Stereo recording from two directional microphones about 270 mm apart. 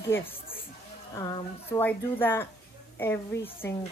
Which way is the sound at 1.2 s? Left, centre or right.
Centre.